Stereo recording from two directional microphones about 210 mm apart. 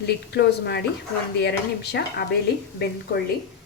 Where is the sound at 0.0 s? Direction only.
50° left (ahead or behind).